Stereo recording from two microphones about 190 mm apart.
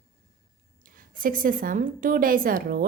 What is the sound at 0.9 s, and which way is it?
A woman's voice, 45° right (ahead or behind).